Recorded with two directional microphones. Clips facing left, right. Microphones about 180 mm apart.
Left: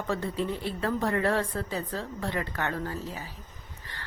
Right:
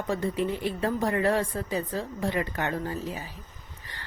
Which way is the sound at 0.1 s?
15° right (ahead or behind).